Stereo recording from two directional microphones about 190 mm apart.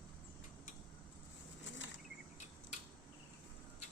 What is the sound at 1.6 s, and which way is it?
Bird flight, 80° left.